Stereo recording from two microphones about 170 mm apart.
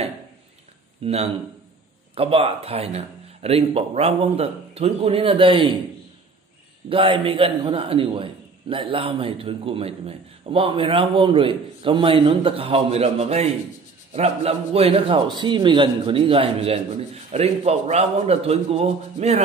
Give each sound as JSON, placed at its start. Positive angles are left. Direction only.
{"t": 1.0, "sound": "a man's voice", "side_deg": -35}
{"t": 6.9, "sound": "a man's voice", "side_deg": -30}